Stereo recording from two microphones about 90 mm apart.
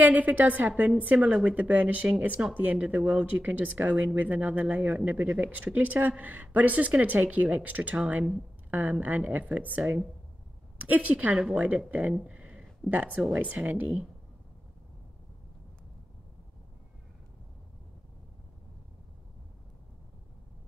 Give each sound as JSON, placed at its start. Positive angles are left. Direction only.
{"t": 0.0, "sound": "speech", "side_deg": -15}
{"t": 12.2, "sound": "a sound", "side_deg": -10}
{"t": 13.3, "sound": "speech", "side_deg": -15}